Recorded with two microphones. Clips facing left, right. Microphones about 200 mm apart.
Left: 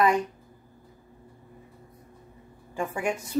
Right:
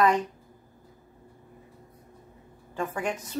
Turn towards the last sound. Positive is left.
turn(degrees=10)  # may be behind; listen again after turning